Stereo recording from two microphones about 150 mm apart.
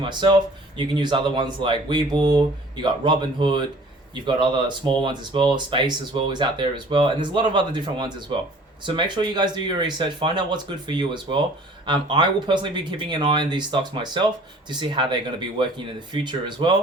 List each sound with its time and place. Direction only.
0.0 s speech: 30° right (ahead or behind)